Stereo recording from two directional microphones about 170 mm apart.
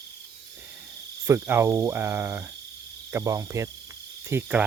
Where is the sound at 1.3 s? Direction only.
15° right (ahead or behind).